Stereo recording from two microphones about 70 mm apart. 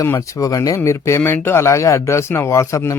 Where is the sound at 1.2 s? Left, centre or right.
Left.